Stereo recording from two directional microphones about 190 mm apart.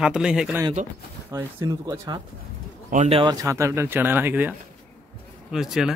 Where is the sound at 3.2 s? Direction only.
20° right (ahead or behind).